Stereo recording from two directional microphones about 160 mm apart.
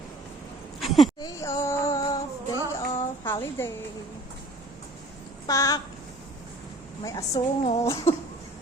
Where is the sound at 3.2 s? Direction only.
15° left (ahead or behind).